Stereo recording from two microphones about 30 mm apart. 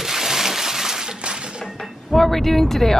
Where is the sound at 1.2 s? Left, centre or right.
Right.